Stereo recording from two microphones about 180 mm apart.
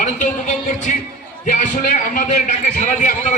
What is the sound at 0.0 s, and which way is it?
A man's voice, 45° left (ahead or behind).